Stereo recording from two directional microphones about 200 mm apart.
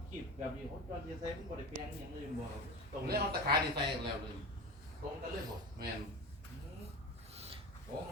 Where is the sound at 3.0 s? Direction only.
50° right (ahead or behind).